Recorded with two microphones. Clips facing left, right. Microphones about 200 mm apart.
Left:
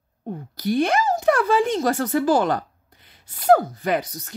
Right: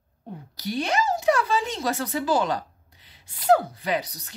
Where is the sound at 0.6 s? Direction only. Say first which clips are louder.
Left 5 dB; 55° left (ahead or behind).